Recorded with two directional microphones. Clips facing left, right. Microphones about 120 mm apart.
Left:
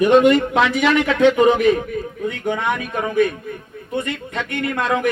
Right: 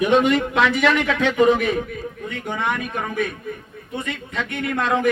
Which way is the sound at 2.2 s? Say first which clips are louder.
Left 7 dB; 70° left (ahead or behind).